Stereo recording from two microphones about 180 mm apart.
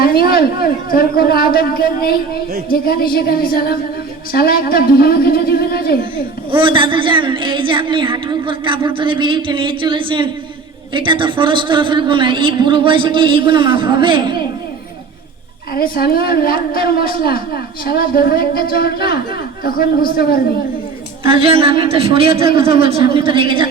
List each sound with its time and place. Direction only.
0.0 s a woman's voice: 55° left (ahead or behind)
6.5 s a woman's voice: 30° right (ahead or behind)
15.7 s a woman's voice: 60° left (ahead or behind)
21.2 s a man's voice: 30° right (ahead or behind)